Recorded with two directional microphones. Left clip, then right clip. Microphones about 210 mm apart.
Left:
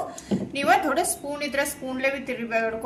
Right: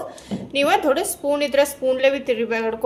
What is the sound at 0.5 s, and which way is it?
A woman's voice, 40° right (ahead or behind).